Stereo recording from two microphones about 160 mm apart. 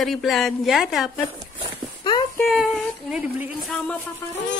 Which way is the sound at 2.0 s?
30° left (ahead or behind).